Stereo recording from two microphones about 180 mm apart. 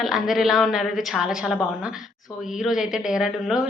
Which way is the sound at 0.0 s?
Centre (ahead or behind).